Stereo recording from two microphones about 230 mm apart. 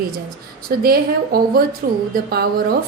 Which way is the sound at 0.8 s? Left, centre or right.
Right.